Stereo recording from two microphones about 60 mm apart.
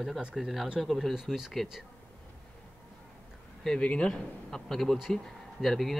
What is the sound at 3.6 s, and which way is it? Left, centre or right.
Speech, centre.